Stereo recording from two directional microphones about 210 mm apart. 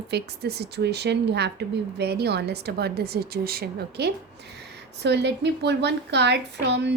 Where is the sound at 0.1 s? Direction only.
50° right (ahead or behind).